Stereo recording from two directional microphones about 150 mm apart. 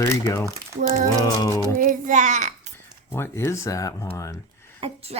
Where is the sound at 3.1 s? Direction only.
15° left (ahead or behind).